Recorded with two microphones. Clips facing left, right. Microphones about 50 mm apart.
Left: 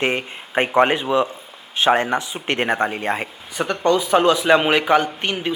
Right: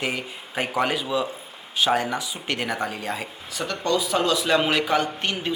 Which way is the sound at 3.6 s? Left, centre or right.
Left.